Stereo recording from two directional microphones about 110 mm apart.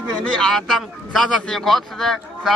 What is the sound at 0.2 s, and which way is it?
A man's voice, 10° left (ahead or behind).